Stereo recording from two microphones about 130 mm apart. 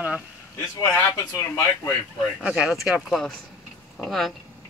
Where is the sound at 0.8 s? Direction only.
25° left (ahead or behind).